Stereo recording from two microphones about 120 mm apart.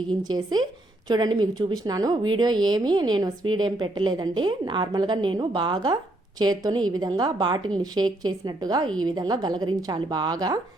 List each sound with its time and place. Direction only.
0.3 s a woman's voice: 35° right (ahead or behind)